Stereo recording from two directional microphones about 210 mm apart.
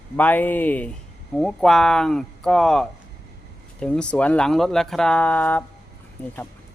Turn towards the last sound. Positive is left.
turn(degrees=10)  # may be behind; listen again after turning